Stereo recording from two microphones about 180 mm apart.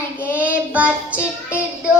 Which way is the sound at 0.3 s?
10° right (ahead or behind).